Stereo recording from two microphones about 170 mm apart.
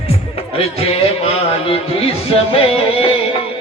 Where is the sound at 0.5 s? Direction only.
35° left (ahead or behind).